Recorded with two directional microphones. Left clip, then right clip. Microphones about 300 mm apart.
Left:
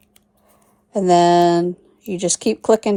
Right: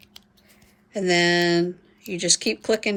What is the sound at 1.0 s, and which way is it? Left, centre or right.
Speech, left.